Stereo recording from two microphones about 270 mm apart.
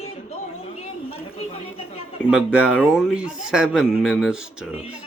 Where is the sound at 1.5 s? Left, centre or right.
Left.